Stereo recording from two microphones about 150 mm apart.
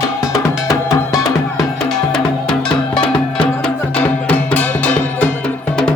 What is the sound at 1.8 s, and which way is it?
Music, 5° left (ahead or behind).